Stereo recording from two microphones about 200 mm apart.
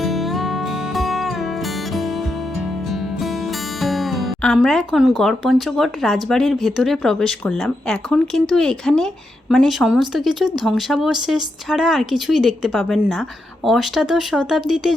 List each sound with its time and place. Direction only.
0.0 s music: centre (ahead or behind)
3.8 s speech: centre (ahead or behind)